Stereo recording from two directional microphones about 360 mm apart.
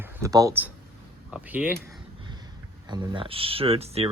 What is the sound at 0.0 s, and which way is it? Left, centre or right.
Speech, centre.